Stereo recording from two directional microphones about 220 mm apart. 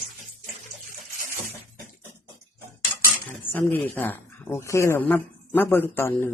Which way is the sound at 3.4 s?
10° left (ahead or behind).